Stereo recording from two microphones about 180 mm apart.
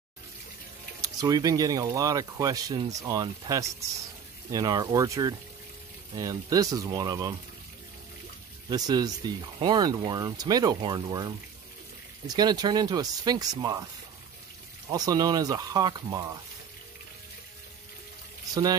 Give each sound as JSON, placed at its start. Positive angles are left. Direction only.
{"t": 1.0, "sound": "speech", "side_deg": -20}
{"t": 8.6, "sound": "speech", "side_deg": -20}
{"t": 14.9, "sound": "speech", "side_deg": -20}
{"t": 18.5, "sound": "a man's voice", "side_deg": -20}